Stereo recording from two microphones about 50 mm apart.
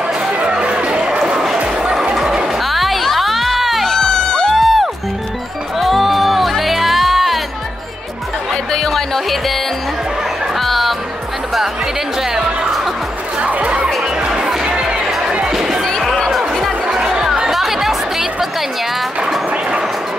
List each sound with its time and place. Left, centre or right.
0.5 s a sound: right
1.8 s music: centre
2.1 s a sound: centre
2.6 s music: centre
4.1 s music: centre
4.5 s music: centre
8.7 s music: centre
12.2 s music: centre
13.4 s music: right
14.2 s music: centre
15.0 s music: centre
16.3 s music: centre
16.8 s music: centre